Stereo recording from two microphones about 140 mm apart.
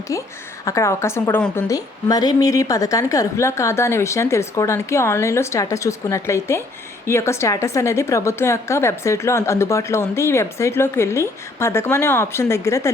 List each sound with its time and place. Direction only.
0.1 s a woman's voice: 25° left (ahead or behind)